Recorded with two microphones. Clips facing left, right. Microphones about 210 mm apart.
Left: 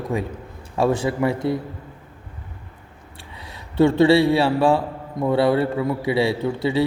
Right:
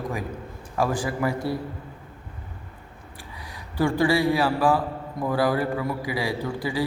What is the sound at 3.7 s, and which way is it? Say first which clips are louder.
A man's voice: left 7 dB; 25° left (ahead or behind).